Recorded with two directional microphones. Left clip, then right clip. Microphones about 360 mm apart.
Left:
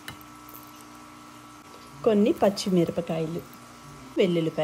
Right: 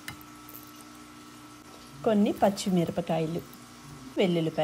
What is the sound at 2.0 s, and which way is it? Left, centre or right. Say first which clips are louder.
Speech: left 3 dB; centre.